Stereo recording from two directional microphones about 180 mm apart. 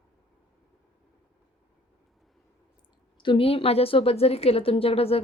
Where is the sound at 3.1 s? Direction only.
25° left (ahead or behind).